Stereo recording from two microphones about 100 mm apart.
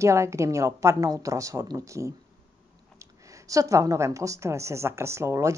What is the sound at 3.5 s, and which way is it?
A woman's voice, 35° right (ahead or behind).